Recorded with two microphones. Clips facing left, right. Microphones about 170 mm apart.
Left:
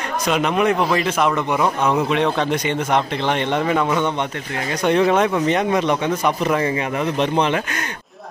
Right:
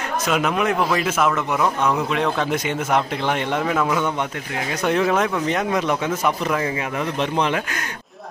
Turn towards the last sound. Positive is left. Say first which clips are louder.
# left 3 dB
turn(degrees=0)  # may be behind; listen again after turning